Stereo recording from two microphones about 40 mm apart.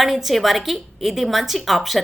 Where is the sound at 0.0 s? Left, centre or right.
Centre.